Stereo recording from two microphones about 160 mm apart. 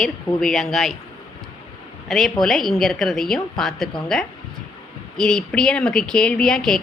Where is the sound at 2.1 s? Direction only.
Centre (ahead or behind).